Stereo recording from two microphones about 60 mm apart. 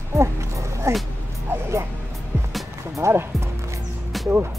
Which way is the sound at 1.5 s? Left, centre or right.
Right.